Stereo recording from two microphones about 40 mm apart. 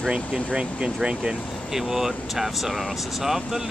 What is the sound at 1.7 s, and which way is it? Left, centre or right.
Speech, centre.